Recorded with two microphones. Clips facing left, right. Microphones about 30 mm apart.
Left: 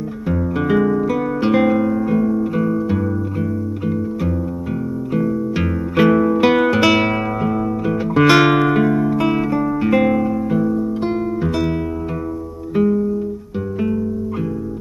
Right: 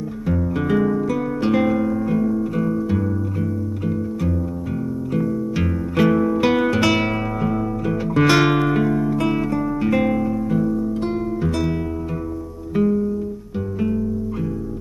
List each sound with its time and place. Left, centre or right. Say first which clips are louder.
0.3 s music: left 3 dB; centre
12.7 s music: left 3 dB; centre